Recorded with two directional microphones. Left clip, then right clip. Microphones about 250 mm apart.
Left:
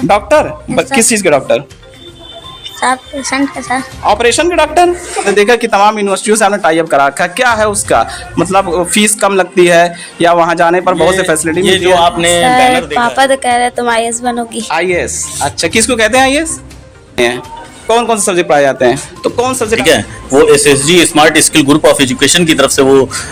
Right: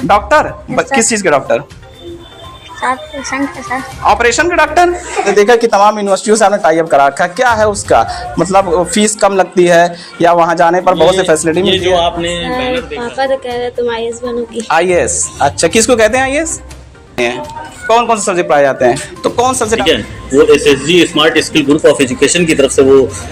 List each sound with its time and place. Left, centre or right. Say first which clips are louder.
0.1 s speech: even; centre
2.8 s speech: left 3 dB; left
4.0 s speech: even; centre
11.7 s speech: left 5 dB; left
12.2 s a man's voice: left 9 dB; left
14.7 s speech: right 3 dB; centre
16.1 s speech: left 3 dB; left
17.8 s speech: even; left
19.2 s speech: right 1 dB; centre
20.5 s a man's voice: left 1 dB; left